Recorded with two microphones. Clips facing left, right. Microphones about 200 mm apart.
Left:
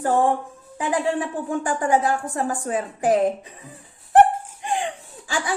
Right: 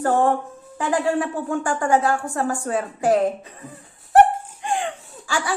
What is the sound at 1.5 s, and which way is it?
Speech, 15° left (ahead or behind).